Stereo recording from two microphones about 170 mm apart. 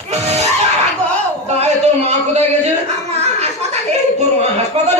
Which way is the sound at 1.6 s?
40° right (ahead or behind).